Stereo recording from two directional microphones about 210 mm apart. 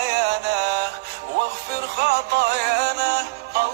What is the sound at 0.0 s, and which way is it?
Music, 50° right (ahead or behind).